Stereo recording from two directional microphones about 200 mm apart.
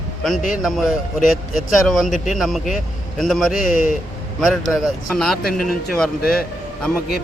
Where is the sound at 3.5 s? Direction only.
40° left (ahead or behind).